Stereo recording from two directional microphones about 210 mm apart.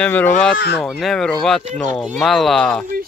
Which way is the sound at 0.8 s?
Centre (ahead or behind).